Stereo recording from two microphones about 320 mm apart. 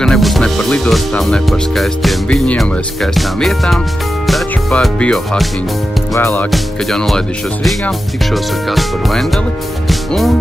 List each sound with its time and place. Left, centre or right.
0.0 s speech: centre
9.8 s music: centre